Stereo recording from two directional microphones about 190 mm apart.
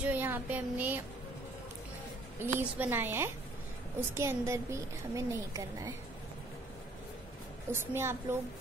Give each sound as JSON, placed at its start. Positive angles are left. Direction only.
{"t": 0.0, "sound": "a sound", "side_deg": -10}
{"t": 2.4, "sound": "a woman's voice", "side_deg": -10}
{"t": 7.7, "sound": "a woman's voice", "side_deg": -10}